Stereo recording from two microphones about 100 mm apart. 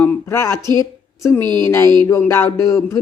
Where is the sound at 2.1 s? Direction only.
30° left (ahead or behind).